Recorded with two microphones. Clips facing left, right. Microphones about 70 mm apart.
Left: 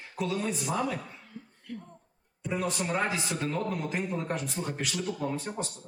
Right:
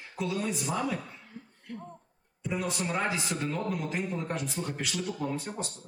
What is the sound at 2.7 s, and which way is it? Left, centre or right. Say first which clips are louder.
A man's voice: left 1 dB; centre.